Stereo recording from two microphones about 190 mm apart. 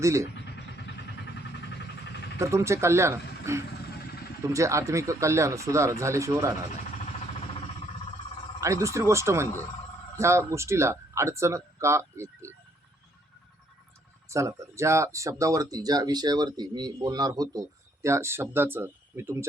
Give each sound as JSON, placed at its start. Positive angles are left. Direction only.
{"t": 0.0, "sound": "speech", "side_deg": -15}
{"t": 2.4, "sound": "speech", "side_deg": -15}
{"t": 8.6, "sound": "speech", "side_deg": -15}
{"t": 14.3, "sound": "speech", "side_deg": -15}